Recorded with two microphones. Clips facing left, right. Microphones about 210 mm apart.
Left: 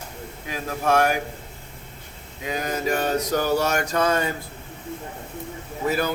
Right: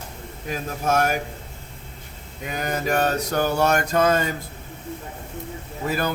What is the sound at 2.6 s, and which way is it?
Mantra, 60° right (ahead or behind).